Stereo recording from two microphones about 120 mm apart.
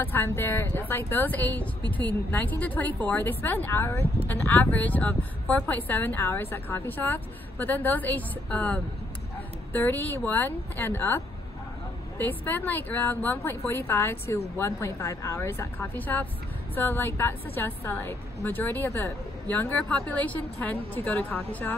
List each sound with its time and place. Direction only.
0.0 s a woman's voice: 15° left (ahead or behind)